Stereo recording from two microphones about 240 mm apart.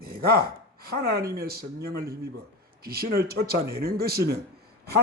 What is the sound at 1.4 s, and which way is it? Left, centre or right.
Speech, right.